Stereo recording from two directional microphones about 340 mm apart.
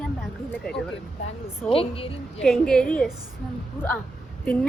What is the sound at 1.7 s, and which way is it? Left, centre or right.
Speech, centre.